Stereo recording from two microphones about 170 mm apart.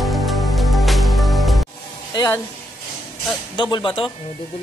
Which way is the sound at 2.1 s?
20° left (ahead or behind).